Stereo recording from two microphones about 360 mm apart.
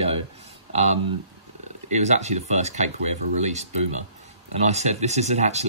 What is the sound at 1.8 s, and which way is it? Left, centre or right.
Speech, centre.